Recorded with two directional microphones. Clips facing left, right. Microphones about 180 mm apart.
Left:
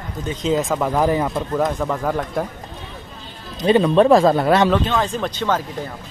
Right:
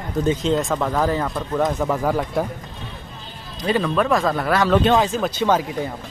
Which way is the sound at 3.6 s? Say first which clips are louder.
Left 6 dB; 25° left (ahead or behind).